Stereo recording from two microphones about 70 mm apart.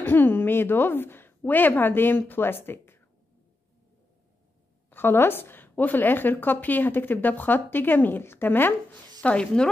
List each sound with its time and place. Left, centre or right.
0.0 s a woman's voice: left
4.9 s a woman's voice: left
9.2 s a woman's voice: centre